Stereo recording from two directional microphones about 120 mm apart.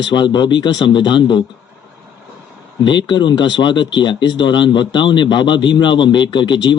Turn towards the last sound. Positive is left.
turn(degrees=40)  # may be behind; listen again after turning